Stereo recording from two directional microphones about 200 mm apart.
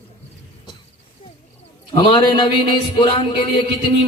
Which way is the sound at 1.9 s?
25° left (ahead or behind).